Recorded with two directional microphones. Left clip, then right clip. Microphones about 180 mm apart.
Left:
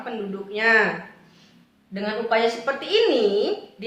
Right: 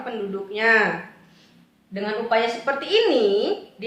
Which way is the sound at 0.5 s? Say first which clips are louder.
Even; 15° right (ahead or behind).